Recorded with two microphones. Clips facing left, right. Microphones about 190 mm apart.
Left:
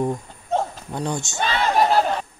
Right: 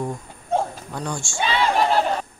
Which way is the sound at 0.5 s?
10° right (ahead or behind).